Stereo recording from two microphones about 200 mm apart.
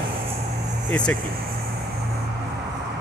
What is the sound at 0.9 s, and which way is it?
Speech, 5° left (ahead or behind).